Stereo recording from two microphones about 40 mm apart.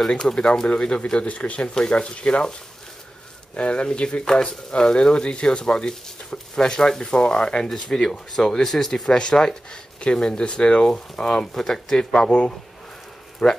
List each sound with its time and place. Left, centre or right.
0.2 s speech: left
3.5 s speech: left